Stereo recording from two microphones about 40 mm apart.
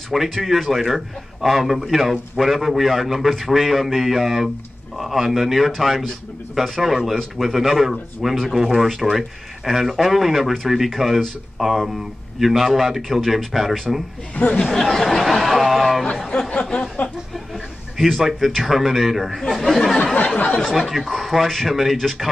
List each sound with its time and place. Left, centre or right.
0.1 s a man's voice: centre
14.3 s speech: left
14.8 s speech: centre
16.3 s a sound: left
16.7 s a sound: left
17.9 s a man's voice: centre